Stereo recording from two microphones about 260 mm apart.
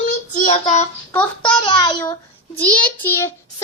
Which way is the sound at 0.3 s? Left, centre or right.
Left.